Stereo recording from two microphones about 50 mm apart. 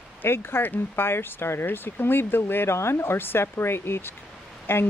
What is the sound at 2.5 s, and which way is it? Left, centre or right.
Speech, left.